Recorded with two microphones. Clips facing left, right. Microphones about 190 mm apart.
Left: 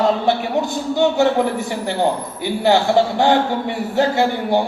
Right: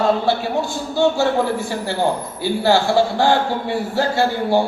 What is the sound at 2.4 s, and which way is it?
A man's voice, 20° left (ahead or behind).